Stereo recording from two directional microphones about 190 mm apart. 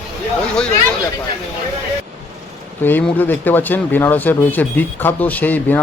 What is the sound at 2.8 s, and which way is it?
Speech, 10° left (ahead or behind).